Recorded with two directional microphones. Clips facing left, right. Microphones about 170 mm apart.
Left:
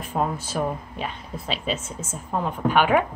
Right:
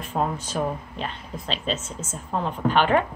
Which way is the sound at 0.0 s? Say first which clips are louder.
Even; 10° left (ahead or behind).